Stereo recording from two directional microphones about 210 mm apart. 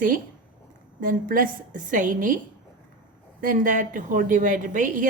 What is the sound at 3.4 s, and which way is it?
A woman's voice, 40° right (ahead or behind).